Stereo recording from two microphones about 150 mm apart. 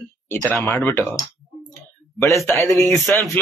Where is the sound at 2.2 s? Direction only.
Centre (ahead or behind).